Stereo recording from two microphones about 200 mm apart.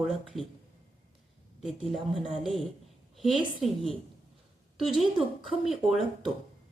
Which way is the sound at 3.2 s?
Centre (ahead or behind).